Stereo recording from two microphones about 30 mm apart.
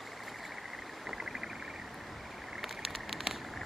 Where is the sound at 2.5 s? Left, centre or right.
Centre.